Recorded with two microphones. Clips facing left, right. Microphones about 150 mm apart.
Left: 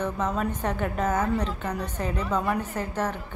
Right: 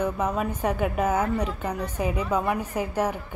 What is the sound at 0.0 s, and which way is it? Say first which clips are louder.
A woman's voice: right 2 dB; 10° right (ahead or behind).